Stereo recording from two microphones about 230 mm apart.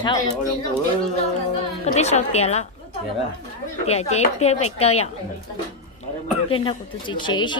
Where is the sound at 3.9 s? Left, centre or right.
Left.